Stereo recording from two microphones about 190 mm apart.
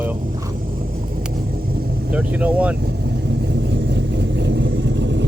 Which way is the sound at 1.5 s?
50° right (ahead or behind).